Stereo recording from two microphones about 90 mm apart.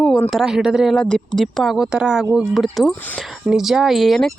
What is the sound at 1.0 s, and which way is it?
A woman's voice, 10° left (ahead or behind).